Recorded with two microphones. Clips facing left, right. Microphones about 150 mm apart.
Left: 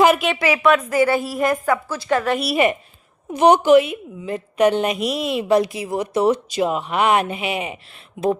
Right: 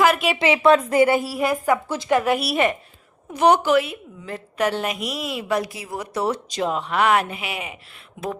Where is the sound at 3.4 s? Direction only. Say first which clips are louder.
Left 4 dB; 20° left (ahead or behind).